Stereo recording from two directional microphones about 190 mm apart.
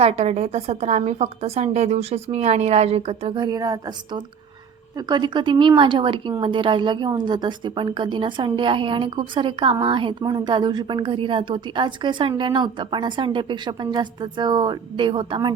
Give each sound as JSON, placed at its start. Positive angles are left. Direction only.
{"t": 0.0, "sound": "a woman's voice", "side_deg": -35}